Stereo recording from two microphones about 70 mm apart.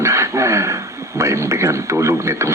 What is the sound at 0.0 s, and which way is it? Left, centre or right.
Radio, right.